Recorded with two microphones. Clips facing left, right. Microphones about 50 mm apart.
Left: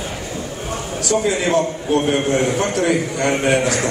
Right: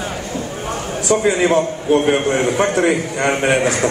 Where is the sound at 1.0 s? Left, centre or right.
Right.